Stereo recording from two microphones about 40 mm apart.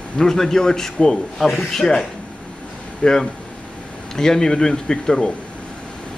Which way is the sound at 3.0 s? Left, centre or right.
Left.